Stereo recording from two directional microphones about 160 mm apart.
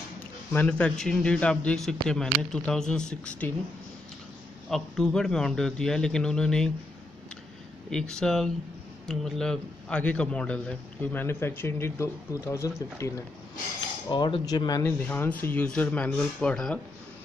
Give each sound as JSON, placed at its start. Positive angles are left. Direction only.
{"t": 0.5, "sound": "a man's voice", "side_deg": 10}
{"t": 4.6, "sound": "a man's voice", "side_deg": 0}
{"t": 7.9, "sound": "a man's voice", "side_deg": 5}
{"t": 14.0, "sound": "speech", "side_deg": 30}
{"t": 14.9, "sound": "speech", "side_deg": 10}